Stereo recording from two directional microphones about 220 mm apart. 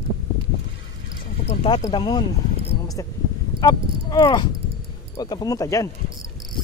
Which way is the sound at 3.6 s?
15° left (ahead or behind).